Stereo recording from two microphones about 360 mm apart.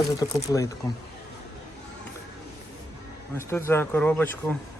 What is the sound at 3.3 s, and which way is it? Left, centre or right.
Speech, centre.